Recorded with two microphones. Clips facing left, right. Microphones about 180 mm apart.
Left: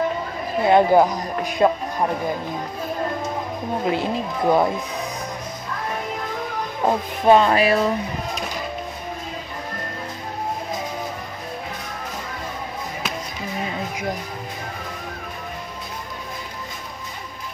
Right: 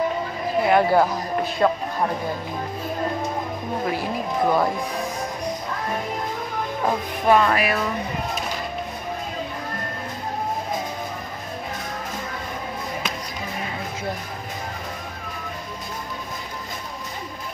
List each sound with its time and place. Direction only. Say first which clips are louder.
0.7 s speech: left 4 dB; 20° left (ahead or behind)
3.8 s speech: left 4 dB; 25° left (ahead or behind)
6.8 s speech: left 4 dB; 25° left (ahead or behind)